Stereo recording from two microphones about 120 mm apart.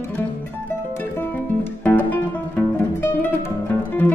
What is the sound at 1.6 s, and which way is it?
Music, 15° left (ahead or behind).